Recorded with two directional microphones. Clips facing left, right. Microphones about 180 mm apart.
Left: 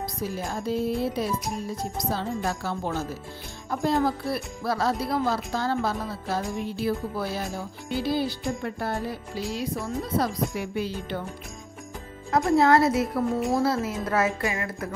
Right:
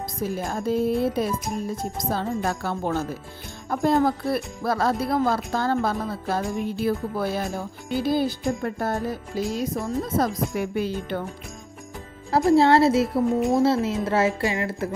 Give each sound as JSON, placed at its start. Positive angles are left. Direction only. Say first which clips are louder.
{"t": 0.2, "sound": "speech", "louder": "right 5 dB", "side_deg": -50}
{"t": 12.3, "sound": "a woman's voice", "louder": "right 3 dB", "side_deg": -35}